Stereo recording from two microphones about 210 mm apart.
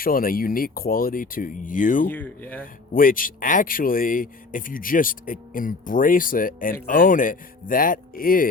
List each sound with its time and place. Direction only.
0.0 s speech: 45° left (ahead or behind)
2.0 s speech: 10° left (ahead or behind)
2.9 s a man's voice: 40° left (ahead or behind)